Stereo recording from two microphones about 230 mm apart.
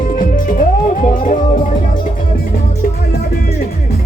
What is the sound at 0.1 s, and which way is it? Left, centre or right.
Music, left.